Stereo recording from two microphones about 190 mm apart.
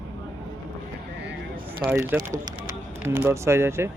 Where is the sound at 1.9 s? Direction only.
10° right (ahead or behind).